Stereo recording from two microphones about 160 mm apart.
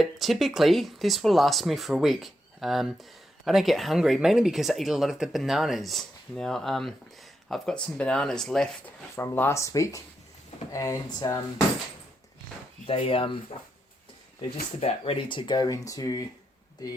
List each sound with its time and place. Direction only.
0.0 s speech: centre (ahead or behind)
9.1 s speech: 15° left (ahead or behind)
12.9 s speech: 35° left (ahead or behind)
14.8 s speech: 40° left (ahead or behind); by 16.2 s 20° left (ahead or behind)